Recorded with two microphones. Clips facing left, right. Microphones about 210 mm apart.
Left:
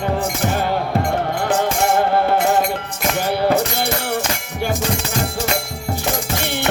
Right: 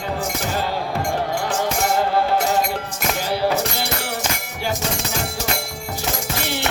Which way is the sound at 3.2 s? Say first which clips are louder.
Left 4 dB; 55° left (ahead or behind).